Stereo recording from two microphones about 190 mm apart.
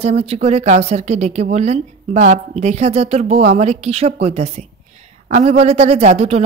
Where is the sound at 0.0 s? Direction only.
35° right (ahead or behind).